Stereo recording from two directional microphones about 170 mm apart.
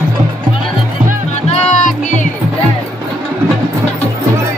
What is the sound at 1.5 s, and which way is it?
Music, 45° left (ahead or behind).